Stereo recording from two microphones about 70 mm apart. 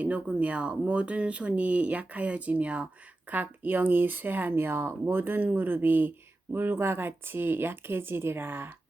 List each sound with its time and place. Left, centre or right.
0.0 s speech: centre